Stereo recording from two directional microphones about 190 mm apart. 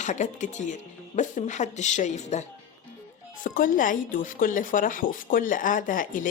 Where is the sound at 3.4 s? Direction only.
45° left (ahead or behind).